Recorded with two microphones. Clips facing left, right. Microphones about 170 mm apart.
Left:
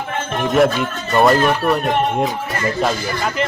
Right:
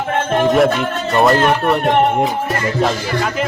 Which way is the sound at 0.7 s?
70° right (ahead or behind).